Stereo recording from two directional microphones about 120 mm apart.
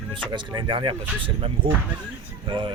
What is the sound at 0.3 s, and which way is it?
Speech, 40° right (ahead or behind).